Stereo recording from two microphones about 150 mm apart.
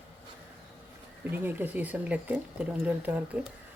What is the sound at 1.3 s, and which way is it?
Speech, 15° right (ahead or behind).